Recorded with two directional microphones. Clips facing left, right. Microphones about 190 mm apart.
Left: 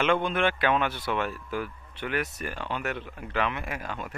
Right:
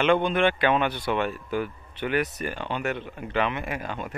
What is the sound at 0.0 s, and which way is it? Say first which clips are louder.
Speech: right 4 dB; centre (ahead or behind).